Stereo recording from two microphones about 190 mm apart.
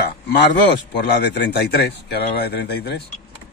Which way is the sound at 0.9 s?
60° left (ahead or behind).